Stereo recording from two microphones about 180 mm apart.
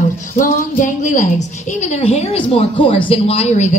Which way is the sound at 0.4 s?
45° left (ahead or behind).